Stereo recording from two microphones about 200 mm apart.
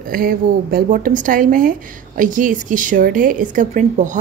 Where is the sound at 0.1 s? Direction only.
45° right (ahead or behind).